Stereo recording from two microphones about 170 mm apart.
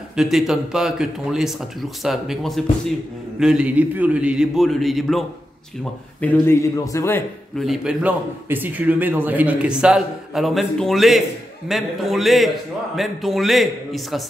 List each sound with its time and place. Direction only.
0.1 s a man's voice: centre (ahead or behind)
6.2 s speech: 15° left (ahead or behind)
7.5 s a man's voice: centre (ahead or behind)